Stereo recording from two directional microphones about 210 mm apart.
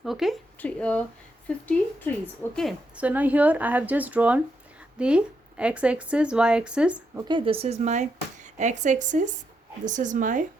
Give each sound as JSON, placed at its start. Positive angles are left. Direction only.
{"t": 0.0, "sound": "a woman's voice", "side_deg": 0}
{"t": 7.3, "sound": "speech", "side_deg": -25}